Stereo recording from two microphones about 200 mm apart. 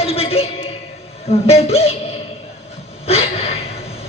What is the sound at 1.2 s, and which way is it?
Speech, 30° left (ahead or behind).